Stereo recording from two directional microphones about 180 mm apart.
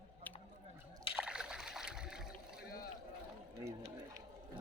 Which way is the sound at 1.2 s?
5° right (ahead or behind).